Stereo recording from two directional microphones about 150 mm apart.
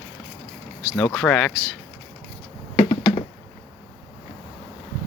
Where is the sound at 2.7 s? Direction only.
40° left (ahead or behind).